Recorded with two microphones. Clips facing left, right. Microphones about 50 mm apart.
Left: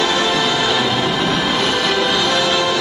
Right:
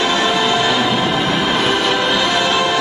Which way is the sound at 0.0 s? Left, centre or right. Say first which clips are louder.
Right 1 dB; centre.